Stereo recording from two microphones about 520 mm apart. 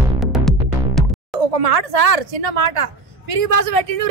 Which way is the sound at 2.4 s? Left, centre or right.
Right.